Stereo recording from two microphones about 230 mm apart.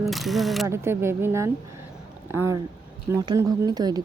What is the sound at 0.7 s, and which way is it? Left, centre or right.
Speech, centre.